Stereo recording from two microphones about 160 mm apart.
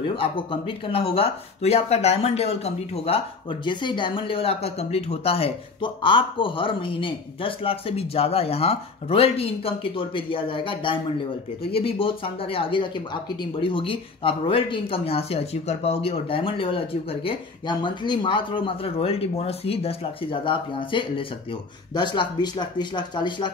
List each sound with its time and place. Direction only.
0.0 s speech: 35° left (ahead or behind)